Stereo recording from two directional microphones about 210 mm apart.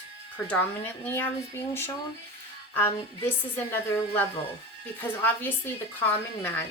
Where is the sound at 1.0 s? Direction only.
10° left (ahead or behind).